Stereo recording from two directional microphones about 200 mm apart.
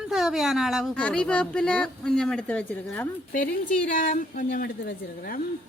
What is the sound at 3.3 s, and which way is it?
A woman's voice, 40° left (ahead or behind).